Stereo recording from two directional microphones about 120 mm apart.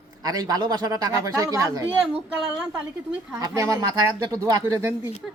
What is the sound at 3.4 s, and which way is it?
Speech, 30° right (ahead or behind).